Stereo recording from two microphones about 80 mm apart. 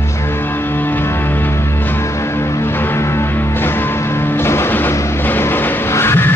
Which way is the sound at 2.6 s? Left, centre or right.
Left.